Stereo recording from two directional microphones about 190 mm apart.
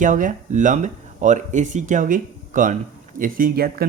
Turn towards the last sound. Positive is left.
turn(degrees=-50)  # may be behind; listen again after turning